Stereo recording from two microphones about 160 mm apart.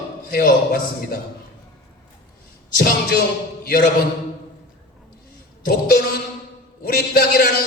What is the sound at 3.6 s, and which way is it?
Speech, 65° left (ahead or behind).